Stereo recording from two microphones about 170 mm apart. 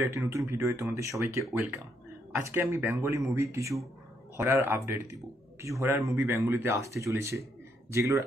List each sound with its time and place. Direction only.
0.0 s speech: 15° right (ahead or behind)